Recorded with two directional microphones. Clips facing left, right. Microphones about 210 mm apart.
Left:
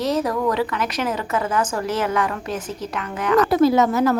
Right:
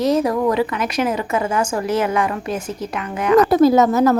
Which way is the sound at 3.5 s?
40° right (ahead or behind).